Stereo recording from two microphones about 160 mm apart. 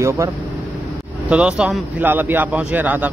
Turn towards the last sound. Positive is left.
turn(degrees=-10)  # may be behind; listen again after turning